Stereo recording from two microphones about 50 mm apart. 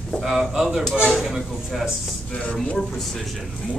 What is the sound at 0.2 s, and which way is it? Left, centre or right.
Speech, centre.